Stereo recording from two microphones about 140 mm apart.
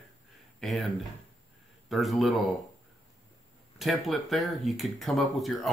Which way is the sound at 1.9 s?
Centre (ahead or behind).